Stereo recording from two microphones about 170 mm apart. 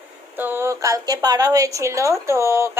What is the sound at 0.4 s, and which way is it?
A woman's voice, 15° right (ahead or behind).